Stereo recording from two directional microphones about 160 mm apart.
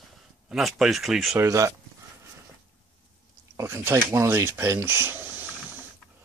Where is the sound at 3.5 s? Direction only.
15° right (ahead or behind).